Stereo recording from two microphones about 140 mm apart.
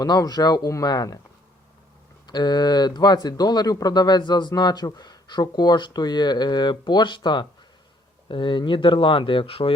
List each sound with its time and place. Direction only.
0.0 s speech: 30° left (ahead or behind)
2.2 s speech: 30° left (ahead or behind)